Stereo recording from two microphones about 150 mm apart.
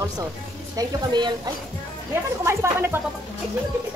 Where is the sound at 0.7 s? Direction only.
30° right (ahead or behind).